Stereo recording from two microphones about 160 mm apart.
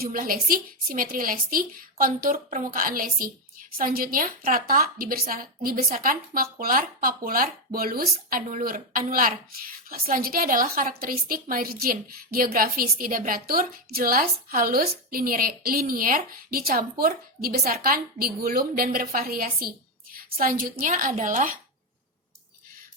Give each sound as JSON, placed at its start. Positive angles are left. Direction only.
{"t": 0.0, "sound": "a woman's voice", "side_deg": -60}